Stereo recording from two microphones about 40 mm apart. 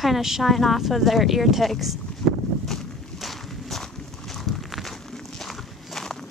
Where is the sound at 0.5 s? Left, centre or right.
Centre.